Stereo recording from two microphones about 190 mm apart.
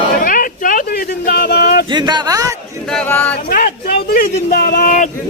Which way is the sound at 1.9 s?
25° right (ahead or behind).